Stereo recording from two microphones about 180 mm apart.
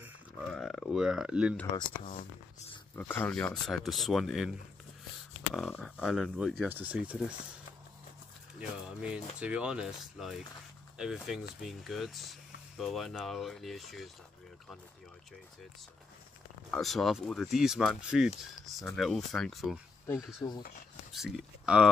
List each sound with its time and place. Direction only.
0.5 s speech: centre (ahead or behind)
3.0 s speech: 10° left (ahead or behind); by 7.3 s 5° right (ahead or behind)
8.5 s speech: 5° right (ahead or behind)
16.7 s speech: centre (ahead or behind)
20.3 s speech: 25° left (ahead or behind)
21.1 s speech: centre (ahead or behind)